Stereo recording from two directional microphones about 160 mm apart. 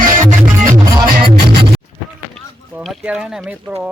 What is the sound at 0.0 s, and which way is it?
Music, 55° right (ahead or behind).